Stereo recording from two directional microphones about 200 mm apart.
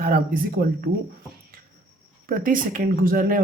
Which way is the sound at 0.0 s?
45° right (ahead or behind).